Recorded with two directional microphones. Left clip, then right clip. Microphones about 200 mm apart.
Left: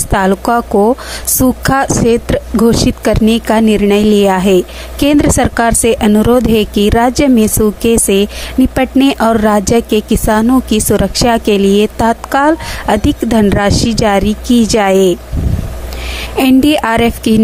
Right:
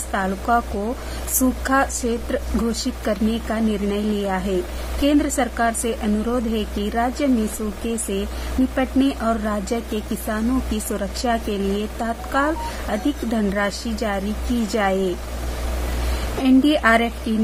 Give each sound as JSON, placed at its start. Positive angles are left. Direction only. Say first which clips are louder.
{"t": 0.1, "sound": "speech", "louder": "left 9 dB", "side_deg": 50}
{"t": 16.4, "sound": "speech", "louder": "left 6 dB", "side_deg": 50}